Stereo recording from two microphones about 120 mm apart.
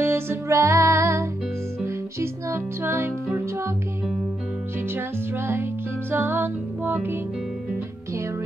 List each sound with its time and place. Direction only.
0.0 s music: 20° right (ahead or behind)
4.8 s music: 20° right (ahead or behind)